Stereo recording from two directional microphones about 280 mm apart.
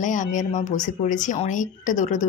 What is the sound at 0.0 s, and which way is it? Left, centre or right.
Speech, left.